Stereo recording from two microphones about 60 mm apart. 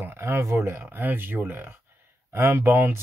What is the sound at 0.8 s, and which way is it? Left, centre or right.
Speech, right.